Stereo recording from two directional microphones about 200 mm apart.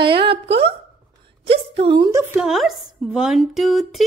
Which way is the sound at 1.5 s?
30° right (ahead or behind).